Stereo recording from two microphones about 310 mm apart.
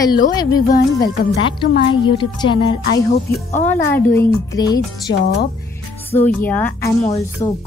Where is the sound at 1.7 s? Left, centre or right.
Left.